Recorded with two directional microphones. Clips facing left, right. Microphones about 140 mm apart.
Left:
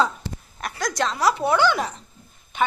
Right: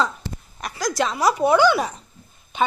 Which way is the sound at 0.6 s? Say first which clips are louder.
Right 2 dB; centre (ahead or behind).